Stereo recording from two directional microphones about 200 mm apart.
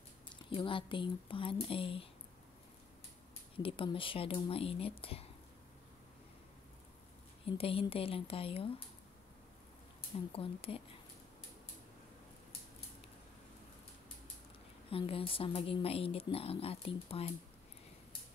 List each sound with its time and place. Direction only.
0.5 s speech: 25° left (ahead or behind)
3.5 s speech: 25° left (ahead or behind)
7.4 s speech: 30° left (ahead or behind)
10.1 s speech: 25° left (ahead or behind)
14.9 s speech: 30° left (ahead or behind)